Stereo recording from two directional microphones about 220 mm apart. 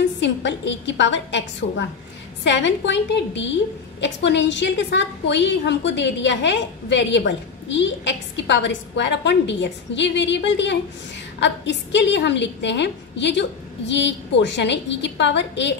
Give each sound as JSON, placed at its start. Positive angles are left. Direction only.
{"t": 0.2, "sound": "a woman's voice", "side_deg": 55}